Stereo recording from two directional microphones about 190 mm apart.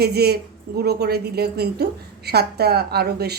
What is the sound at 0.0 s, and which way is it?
A woman's voice, 55° right (ahead or behind).